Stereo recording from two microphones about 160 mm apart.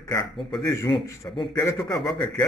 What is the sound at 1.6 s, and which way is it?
Speech, 15° left (ahead or behind).